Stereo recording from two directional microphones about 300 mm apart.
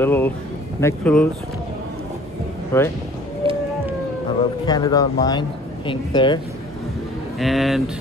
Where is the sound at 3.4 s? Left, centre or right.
Centre.